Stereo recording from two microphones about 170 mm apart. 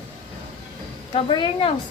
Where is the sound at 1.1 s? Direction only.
30° left (ahead or behind).